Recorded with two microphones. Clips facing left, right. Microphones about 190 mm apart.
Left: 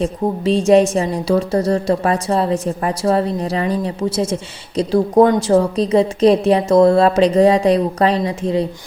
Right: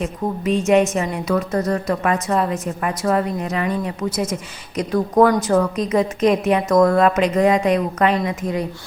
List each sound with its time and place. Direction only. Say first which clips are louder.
0.0 s a woman's voice: left 4 dB; 30° left (ahead or behind)